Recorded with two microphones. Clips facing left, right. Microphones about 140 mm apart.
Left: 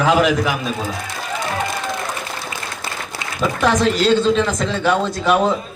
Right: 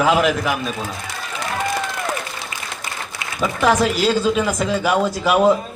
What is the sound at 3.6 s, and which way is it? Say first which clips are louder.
Speech: even; 5° right (ahead or behind).